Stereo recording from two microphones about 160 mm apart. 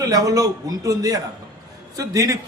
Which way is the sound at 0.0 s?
20° right (ahead or behind).